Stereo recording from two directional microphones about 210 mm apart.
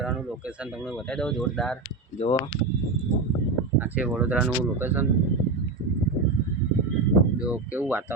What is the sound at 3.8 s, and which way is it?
Speech, 5° right (ahead or behind).